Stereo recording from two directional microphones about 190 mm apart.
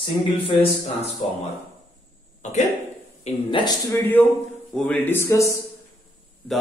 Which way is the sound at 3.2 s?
25° left (ahead or behind).